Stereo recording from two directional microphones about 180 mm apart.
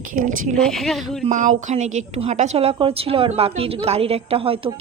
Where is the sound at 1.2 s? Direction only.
45° right (ahead or behind).